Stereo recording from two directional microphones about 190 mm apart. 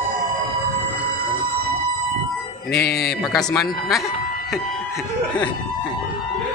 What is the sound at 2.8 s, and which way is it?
Speech, 55° left (ahead or behind).